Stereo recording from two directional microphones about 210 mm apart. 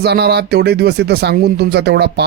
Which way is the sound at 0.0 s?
50° right (ahead or behind).